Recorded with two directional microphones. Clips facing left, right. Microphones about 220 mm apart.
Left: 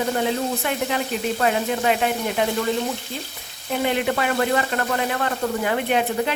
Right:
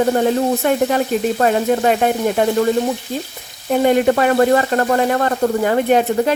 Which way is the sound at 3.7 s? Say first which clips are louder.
Right 9 dB; 45° right (ahead or behind).